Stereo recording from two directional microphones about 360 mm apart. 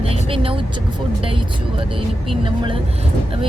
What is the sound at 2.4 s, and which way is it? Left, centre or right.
Speech, centre.